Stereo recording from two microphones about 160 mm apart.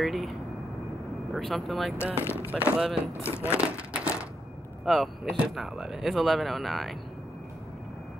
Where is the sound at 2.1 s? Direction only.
15° left (ahead or behind).